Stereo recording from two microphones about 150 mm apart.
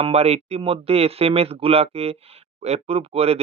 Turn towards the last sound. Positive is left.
turn(degrees=-40)  # may be behind; listen again after turning